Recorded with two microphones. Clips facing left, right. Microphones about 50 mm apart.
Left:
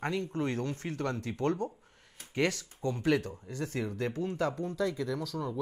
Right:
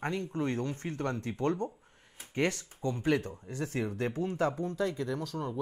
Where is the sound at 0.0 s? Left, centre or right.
Centre.